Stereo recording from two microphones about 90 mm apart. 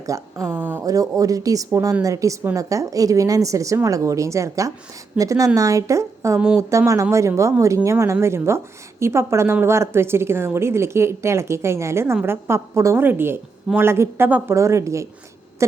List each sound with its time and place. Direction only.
0.0 s speech: 35° right (ahead or behind)
0.4 s a woman's voice: 25° right (ahead or behind)
0.9 s a woman's voice: 40° right (ahead or behind)
14.3 s a woman's voice: 15° right (ahead or behind)
14.5 s a woman's voice: 35° right (ahead or behind)